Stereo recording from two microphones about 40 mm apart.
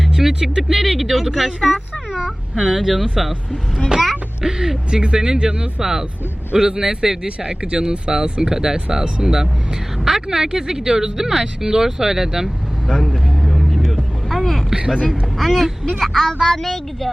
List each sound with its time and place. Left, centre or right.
0.0 s speech: centre
2.1 s speech: centre
3.8 s speech: centre
7.3 s speech: right
13.4 s vehicle: centre
15.1 s speech: centre